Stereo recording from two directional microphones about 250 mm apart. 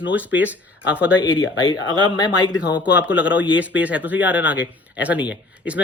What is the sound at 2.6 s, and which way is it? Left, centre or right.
Speech, centre.